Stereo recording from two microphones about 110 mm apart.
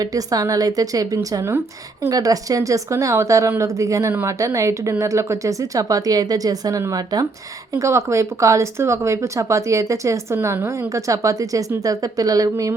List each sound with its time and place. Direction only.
0.0 s a woman's voice: 35° right (ahead or behind)